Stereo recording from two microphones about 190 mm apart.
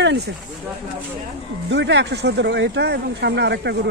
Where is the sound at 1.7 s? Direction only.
65° right (ahead or behind).